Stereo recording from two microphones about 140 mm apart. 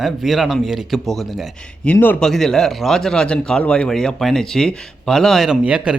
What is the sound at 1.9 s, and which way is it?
Speech, 10° left (ahead or behind).